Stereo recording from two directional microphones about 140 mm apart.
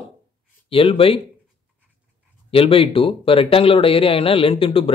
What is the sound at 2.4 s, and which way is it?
Speech, 40° left (ahead or behind).